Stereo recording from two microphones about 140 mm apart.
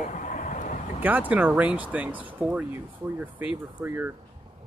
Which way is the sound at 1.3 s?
10° right (ahead or behind).